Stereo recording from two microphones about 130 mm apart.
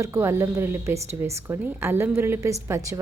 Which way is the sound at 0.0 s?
20° right (ahead or behind).